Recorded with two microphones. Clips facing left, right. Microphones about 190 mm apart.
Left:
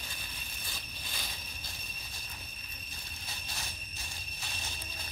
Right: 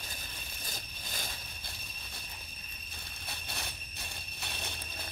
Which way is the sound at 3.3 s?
60° right (ahead or behind).